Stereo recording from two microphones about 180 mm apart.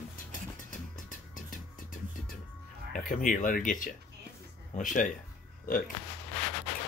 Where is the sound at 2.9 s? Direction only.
50° left (ahead or behind).